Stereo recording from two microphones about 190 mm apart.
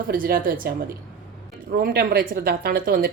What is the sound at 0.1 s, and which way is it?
A woman's voice, 50° right (ahead or behind).